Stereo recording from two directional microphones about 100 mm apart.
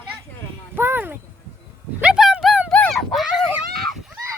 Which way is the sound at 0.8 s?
20° right (ahead or behind).